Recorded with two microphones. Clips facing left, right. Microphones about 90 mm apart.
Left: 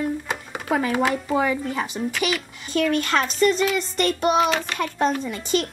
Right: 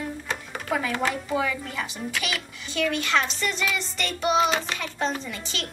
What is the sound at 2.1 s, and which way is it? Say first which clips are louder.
Child singing: left 5 dB; centre (ahead or behind).